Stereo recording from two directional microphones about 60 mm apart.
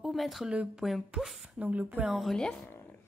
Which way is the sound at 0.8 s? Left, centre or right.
Centre.